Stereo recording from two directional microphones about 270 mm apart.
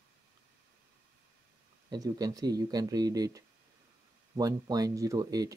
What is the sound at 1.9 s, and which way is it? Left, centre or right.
Speech, centre.